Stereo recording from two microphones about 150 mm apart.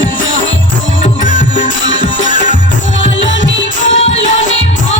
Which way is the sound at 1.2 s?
55° left (ahead or behind).